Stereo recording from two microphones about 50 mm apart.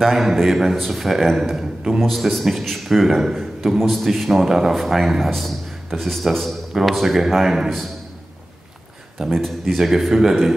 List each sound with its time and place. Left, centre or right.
0.0 s a man's voice: centre
9.3 s a man's voice: centre